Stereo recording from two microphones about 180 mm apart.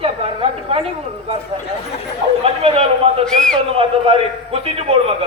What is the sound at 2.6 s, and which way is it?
Speech, 35° right (ahead or behind).